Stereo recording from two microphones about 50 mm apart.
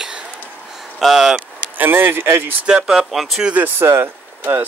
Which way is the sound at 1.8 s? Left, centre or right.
Right.